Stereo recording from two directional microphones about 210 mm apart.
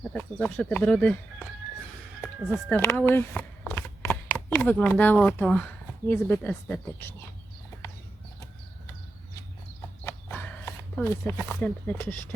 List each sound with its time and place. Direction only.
0.1 s speech: 5° left (ahead or behind)
3.1 s shuffling cards: 10° left (ahead or behind)
4.4 s speech: 10° left (ahead or behind)
10.0 s a sound: 10° left (ahead or behind)